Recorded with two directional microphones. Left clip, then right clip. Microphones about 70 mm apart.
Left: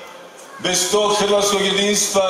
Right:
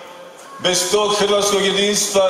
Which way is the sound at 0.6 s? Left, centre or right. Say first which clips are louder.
Right 1 dB; right.